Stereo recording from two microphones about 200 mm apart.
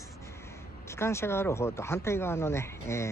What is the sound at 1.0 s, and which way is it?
Speech, 15° left (ahead or behind).